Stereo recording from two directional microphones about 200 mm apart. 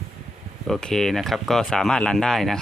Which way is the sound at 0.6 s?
Centre (ahead or behind).